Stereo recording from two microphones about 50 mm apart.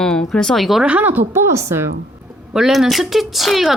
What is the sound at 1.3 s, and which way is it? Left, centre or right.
Speech, right.